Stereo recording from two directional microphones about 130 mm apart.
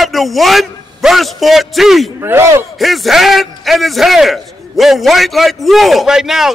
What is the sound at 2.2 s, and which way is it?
Speech, 20° right (ahead or behind).